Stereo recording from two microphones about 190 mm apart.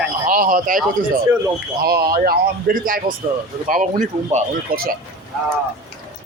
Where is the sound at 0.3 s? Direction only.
45° right (ahead or behind).